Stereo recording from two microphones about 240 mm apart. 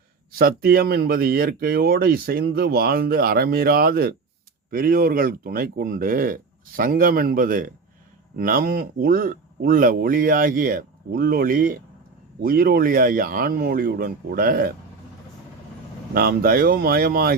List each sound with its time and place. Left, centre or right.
0.3 s speech: right
16.1 s speech: right